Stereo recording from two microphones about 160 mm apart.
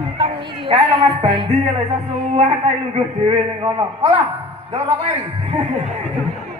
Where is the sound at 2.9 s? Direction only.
35° right (ahead or behind).